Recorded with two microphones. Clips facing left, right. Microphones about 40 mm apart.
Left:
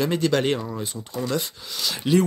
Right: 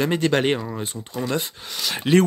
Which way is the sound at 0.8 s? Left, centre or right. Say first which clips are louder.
Right 1 dB; right.